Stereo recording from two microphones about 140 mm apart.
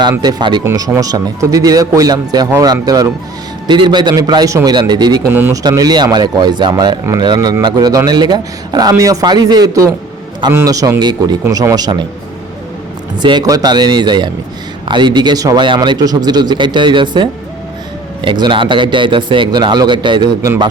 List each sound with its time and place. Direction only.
0.0 s a man's voice: 30° right (ahead or behind)
5.3 s speech: 15° right (ahead or behind)
5.6 s a man's voice: 30° right (ahead or behind)
13.1 s a man's voice: 30° right (ahead or behind)